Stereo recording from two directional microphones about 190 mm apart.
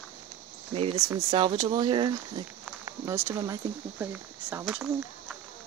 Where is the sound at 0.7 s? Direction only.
30° right (ahead or behind).